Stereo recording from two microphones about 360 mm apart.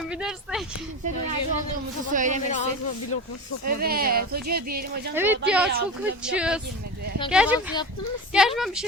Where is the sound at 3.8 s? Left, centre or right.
Right.